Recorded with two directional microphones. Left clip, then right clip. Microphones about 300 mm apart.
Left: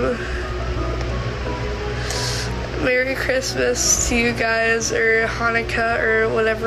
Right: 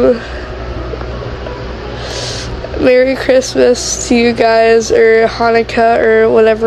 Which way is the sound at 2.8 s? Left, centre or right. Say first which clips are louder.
Right 10 dB; right.